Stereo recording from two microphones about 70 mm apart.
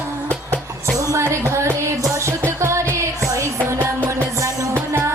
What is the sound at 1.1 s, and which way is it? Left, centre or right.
Music, right.